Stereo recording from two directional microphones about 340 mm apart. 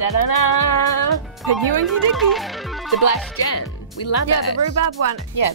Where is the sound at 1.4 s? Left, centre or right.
Centre.